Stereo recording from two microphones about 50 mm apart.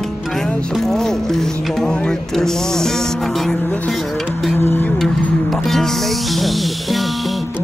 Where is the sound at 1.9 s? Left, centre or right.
Centre.